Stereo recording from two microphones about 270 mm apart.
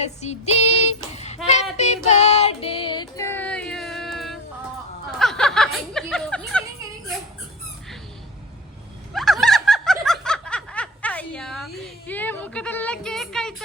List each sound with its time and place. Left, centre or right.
0.0 s child singing: left; by 4.4 s centre
5.2 s snicker: centre
6.5 s a sound: centre
9.1 s snicker: centre
11.8 s a woman's voice: centre